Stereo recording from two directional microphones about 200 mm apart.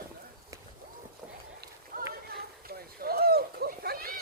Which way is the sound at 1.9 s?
45° right (ahead or behind).